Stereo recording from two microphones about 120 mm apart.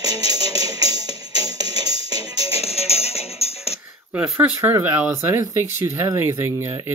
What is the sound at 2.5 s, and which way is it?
Music, 55° left (ahead or behind).